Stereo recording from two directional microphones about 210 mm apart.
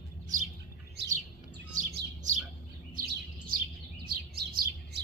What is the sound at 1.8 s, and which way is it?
Bird, 40° right (ahead or behind).